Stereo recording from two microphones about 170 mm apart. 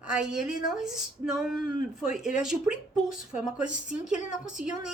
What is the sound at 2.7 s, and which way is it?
Speech, 50° left (ahead or behind).